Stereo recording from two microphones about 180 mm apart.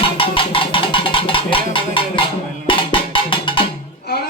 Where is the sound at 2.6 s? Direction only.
30° left (ahead or behind).